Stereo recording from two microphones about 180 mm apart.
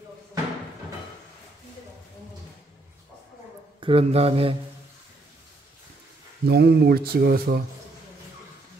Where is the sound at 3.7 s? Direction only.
30° right (ahead or behind).